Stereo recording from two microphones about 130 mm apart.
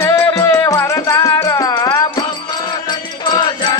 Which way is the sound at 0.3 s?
25° left (ahead or behind).